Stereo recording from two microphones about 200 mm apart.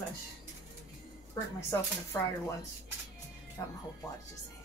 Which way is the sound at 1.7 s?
15° left (ahead or behind).